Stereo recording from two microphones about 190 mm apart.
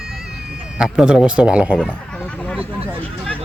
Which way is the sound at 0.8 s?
5° right (ahead or behind).